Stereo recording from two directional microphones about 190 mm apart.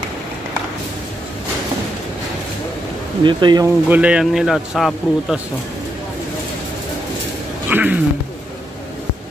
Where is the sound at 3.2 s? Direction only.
20° right (ahead or behind).